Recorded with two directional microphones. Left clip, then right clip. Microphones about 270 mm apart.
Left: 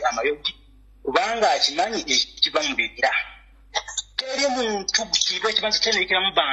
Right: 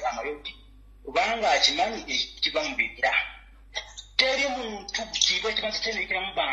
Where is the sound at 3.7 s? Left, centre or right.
Left.